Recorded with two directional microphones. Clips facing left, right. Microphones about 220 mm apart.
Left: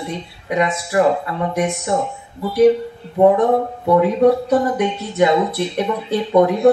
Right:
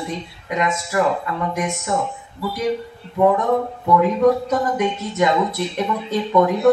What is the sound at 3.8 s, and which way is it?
Speech, 30° left (ahead or behind).